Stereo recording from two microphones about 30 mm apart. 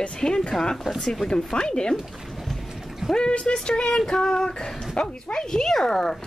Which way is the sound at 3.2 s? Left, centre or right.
Left.